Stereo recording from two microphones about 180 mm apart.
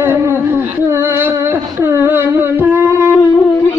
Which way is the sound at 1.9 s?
15° right (ahead or behind).